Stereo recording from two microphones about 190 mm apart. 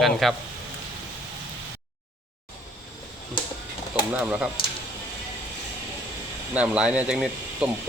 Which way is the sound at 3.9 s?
5° right (ahead or behind).